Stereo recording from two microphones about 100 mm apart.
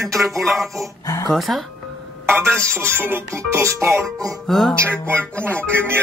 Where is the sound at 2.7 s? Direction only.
20° right (ahead or behind).